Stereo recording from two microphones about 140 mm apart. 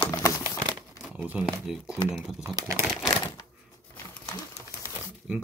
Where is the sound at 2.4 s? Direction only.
20° right (ahead or behind).